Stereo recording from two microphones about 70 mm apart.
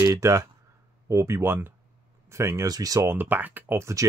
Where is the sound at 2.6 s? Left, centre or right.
Right.